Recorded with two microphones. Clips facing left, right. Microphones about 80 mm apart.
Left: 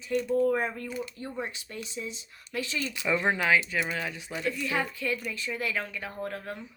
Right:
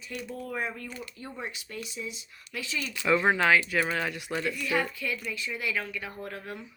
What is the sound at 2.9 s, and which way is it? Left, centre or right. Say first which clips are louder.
Speech: right 4 dB; left.